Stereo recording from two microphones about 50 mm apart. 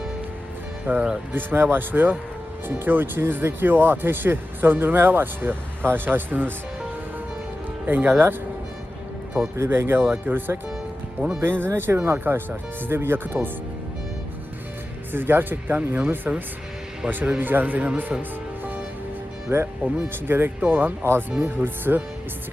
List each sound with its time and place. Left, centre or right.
0.9 s speech: right
7.9 s speech: right
9.6 s speech: right
15.1 s speech: right
17.4 s speech: right
18.2 s music: right
19.5 s speech: right